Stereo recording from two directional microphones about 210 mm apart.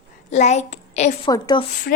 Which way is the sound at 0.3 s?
35° left (ahead or behind).